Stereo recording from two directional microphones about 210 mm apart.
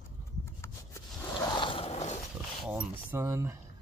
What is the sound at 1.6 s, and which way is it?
Mechanisms, 25° left (ahead or behind).